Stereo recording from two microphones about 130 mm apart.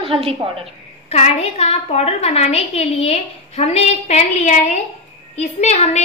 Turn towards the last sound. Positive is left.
turn(degrees=60)  # may be behind; listen again after turning